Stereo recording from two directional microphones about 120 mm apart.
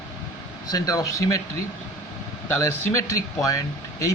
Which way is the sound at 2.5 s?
25° left (ahead or behind).